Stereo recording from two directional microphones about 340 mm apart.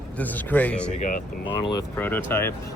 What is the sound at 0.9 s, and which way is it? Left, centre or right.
Speech, left.